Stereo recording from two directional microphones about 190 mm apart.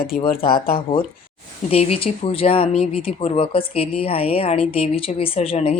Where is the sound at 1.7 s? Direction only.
30° left (ahead or behind).